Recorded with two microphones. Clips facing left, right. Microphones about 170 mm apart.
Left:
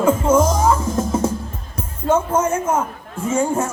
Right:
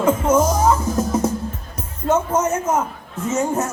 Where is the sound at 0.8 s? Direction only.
30° left (ahead or behind).